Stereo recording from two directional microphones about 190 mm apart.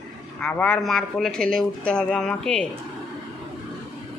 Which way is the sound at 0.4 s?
5° left (ahead or behind).